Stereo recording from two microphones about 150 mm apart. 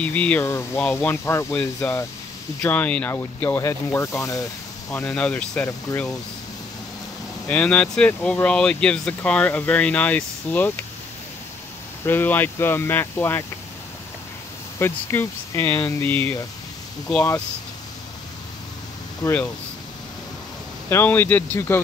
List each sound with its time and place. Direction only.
0.0 s speech: 10° left (ahead or behind)
4.9 s speech: 5° left (ahead or behind)
5.9 s speech: 20° left (ahead or behind)
7.4 s speech: 10° left (ahead or behind)
12.1 s speech: 15° left (ahead or behind)
14.8 s speech: 15° left (ahead or behind)
19.2 s speech: 10° left (ahead or behind)
20.9 s speech: 15° left (ahead or behind)